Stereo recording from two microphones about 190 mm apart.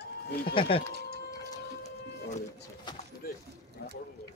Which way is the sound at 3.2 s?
55° left (ahead or behind).